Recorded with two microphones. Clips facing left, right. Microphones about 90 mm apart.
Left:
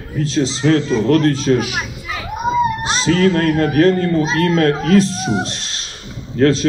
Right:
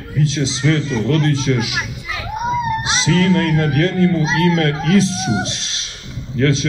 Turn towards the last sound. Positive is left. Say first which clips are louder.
# left 3 dB
turn(degrees=45)  # may be behind; listen again after turning